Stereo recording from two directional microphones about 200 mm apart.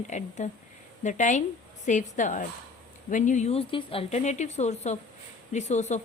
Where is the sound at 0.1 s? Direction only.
35° left (ahead or behind).